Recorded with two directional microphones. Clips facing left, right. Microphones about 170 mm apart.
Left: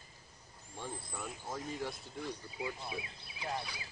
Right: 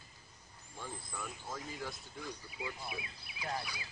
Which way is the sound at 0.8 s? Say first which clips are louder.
Left 2 dB; 25° left (ahead or behind).